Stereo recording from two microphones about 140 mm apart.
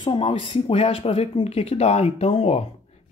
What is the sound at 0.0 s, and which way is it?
Speech, 35° left (ahead or behind).